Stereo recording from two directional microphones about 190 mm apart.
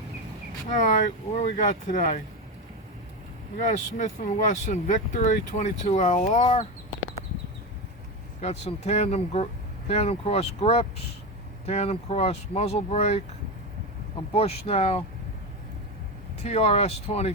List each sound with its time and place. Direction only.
0.7 s speech: 40° left (ahead or behind)
3.6 s speech: 40° left (ahead or behind)
8.4 s speech: 35° left (ahead or behind)
14.3 s speech: 30° left (ahead or behind)
16.4 s speech: 35° left (ahead or behind)